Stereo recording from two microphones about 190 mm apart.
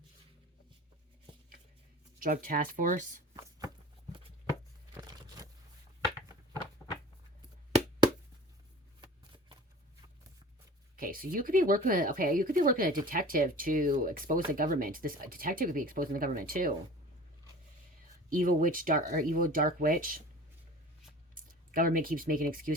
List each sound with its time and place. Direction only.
2.1 s speech: 45° right (ahead or behind)
4.9 s a sound: 20° right (ahead or behind)
9.0 s shuffling cards: 25° right (ahead or behind)
11.0 s speech: 45° right (ahead or behind)
18.3 s speech: 45° right (ahead or behind)
21.3 s speech: 45° right (ahead or behind)